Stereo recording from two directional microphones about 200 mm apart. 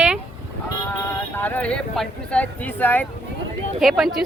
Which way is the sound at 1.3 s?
10° left (ahead or behind).